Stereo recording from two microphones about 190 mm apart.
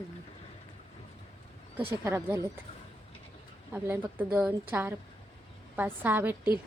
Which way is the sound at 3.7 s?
10° right (ahead or behind).